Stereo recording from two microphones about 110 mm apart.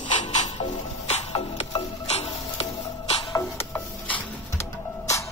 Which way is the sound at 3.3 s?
25° left (ahead or behind).